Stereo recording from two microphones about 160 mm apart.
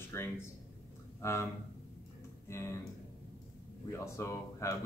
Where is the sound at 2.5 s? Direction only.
15° left (ahead or behind).